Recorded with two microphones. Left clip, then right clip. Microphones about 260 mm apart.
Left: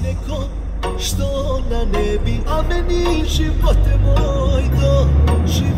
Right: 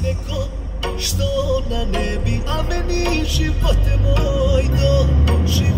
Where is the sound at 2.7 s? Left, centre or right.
Right.